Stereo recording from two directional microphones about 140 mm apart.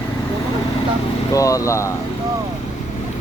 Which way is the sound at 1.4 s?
25° left (ahead or behind).